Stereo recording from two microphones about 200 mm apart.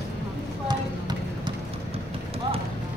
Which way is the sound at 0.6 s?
20° right (ahead or behind).